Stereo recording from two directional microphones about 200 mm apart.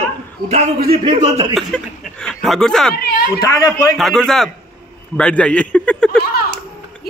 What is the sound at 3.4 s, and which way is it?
Speech, 20° left (ahead or behind).